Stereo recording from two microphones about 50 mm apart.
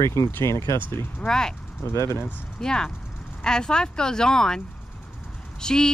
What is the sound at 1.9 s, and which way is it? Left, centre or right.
Speech, left.